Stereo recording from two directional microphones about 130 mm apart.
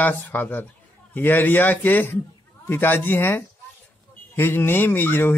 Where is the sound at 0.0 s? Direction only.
15° left (ahead or behind).